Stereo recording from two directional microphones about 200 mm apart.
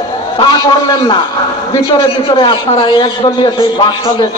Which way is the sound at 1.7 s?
20° left (ahead or behind).